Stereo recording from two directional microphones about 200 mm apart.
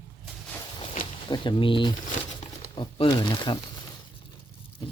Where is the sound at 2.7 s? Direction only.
25° left (ahead or behind).